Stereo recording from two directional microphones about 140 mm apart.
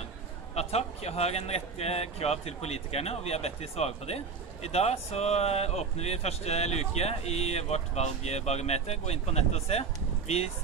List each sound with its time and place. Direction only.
0.6 s speech: 50° left (ahead or behind)